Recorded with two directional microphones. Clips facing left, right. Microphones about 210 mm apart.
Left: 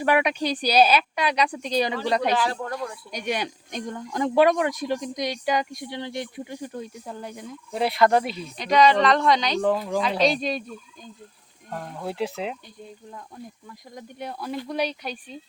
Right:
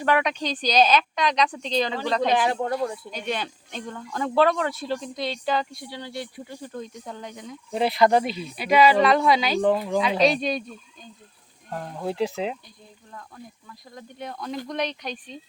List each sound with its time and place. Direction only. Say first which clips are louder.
0.0 s speech: left 2 dB; 10° left (ahead or behind)
2.3 s speech: right 3 dB; 20° right (ahead or behind)
3.1 s speech: left 2 dB; 15° left (ahead or behind)
11.7 s speech: right 2 dB; 5° right (ahead or behind)
13.1 s speech: right 2 dB; 15° left (ahead or behind)